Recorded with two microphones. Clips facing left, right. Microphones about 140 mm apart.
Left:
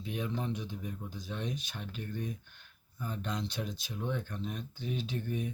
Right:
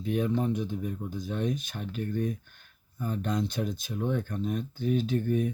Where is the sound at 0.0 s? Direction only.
50° right (ahead or behind).